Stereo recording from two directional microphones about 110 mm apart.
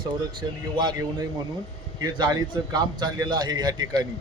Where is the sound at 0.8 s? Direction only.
40° right (ahead or behind).